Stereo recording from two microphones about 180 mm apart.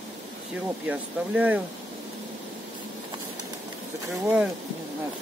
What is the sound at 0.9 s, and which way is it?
Speech, 10° right (ahead or behind).